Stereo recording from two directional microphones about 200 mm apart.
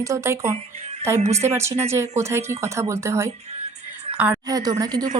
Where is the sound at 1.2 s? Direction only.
35° right (ahead or behind).